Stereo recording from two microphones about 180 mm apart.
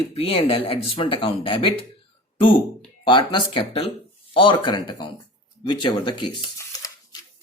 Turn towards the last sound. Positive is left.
turn(degrees=20)  # may be behind; listen again after turning